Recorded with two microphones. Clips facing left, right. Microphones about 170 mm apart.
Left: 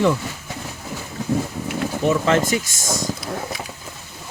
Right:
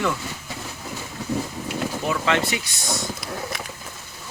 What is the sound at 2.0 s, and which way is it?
Speech, 40° left (ahead or behind).